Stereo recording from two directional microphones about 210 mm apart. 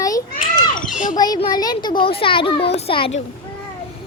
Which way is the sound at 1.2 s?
20° left (ahead or behind).